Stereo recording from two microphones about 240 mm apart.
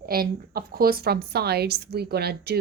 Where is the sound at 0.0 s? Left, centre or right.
Right.